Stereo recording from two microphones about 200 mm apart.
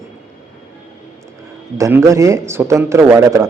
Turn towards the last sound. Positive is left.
turn(degrees=-15)  # may be behind; listen again after turning